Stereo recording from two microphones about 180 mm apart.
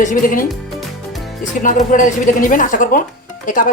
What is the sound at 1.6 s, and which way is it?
Speech, 45° left (ahead or behind).